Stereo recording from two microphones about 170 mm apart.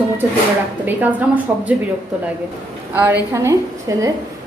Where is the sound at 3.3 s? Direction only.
15° right (ahead or behind).